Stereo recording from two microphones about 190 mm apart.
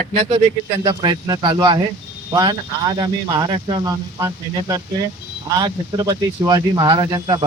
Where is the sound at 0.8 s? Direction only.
20° right (ahead or behind).